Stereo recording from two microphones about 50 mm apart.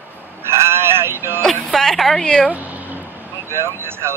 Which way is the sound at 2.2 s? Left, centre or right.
Centre.